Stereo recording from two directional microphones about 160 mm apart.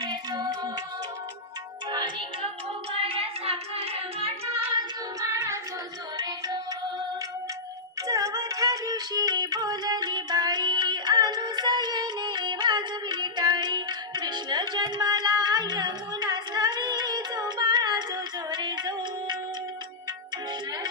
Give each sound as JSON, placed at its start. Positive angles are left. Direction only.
{"t": 0.0, "sound": "music", "side_deg": -25}
{"t": 1.9, "sound": "music", "side_deg": -30}
{"t": 2.9, "sound": "singing", "side_deg": -35}
{"t": 5.2, "sound": "child singing", "side_deg": -20}
{"t": 6.1, "sound": "music", "side_deg": -25}
{"t": 8.1, "sound": "music", "side_deg": -20}